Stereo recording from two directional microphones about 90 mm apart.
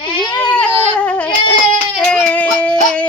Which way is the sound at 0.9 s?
15° left (ahead or behind).